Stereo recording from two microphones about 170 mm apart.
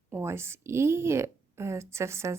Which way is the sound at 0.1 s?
15° right (ahead or behind).